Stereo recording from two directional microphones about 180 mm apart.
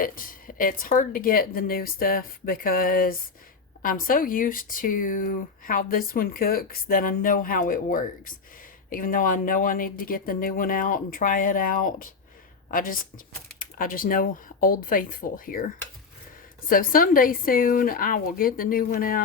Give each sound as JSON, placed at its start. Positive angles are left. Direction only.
{"t": 0.0, "sound": "speech", "side_deg": 50}
{"t": 16.6, "sound": "speech", "side_deg": 50}